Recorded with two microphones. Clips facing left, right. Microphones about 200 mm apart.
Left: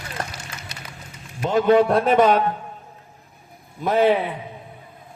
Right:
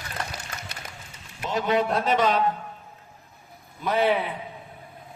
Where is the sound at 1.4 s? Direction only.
50° left (ahead or behind).